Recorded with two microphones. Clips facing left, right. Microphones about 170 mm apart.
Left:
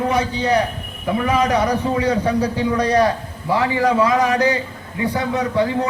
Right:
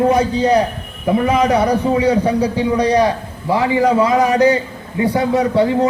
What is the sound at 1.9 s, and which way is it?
A man's voice, 15° right (ahead or behind).